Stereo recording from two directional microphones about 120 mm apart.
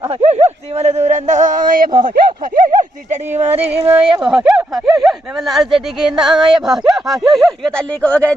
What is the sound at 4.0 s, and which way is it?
Speech, 50° right (ahead or behind).